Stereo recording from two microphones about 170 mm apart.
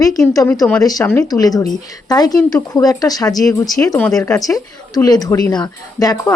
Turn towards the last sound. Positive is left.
turn(degrees=20)  # may be behind; listen again after turning